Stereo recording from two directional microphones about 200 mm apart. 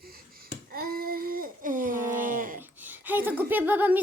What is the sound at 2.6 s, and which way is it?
Speech, 10° right (ahead or behind).